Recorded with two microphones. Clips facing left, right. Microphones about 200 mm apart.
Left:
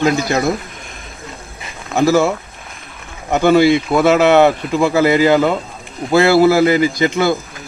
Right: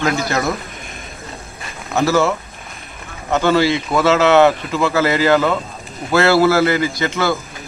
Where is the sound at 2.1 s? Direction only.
15° left (ahead or behind).